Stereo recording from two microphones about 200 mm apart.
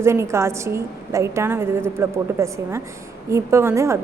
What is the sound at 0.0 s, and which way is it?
A woman's voice, 15° right (ahead or behind).